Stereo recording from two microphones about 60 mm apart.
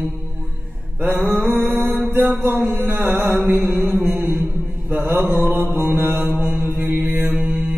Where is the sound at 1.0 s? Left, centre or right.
Right.